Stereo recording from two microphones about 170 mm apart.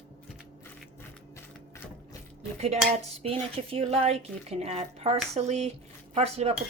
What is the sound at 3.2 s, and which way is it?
Dishes, 35° right (ahead or behind).